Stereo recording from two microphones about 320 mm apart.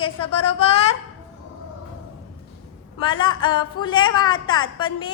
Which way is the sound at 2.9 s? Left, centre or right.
Centre.